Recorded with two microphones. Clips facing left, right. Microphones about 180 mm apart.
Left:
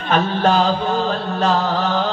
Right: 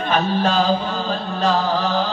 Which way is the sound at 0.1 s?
50° left (ahead or behind).